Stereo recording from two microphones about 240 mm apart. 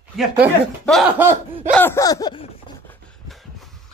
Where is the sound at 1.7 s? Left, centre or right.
Centre.